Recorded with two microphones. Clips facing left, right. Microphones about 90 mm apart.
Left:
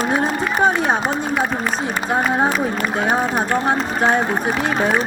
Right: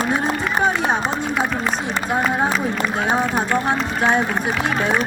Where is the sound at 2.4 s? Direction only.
45° left (ahead or behind).